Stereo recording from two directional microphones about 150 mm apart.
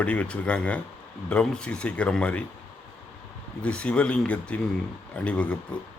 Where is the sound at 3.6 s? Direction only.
5° left (ahead or behind).